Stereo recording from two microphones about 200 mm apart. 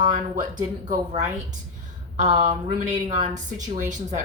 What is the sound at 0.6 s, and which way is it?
Speech, 20° right (ahead or behind).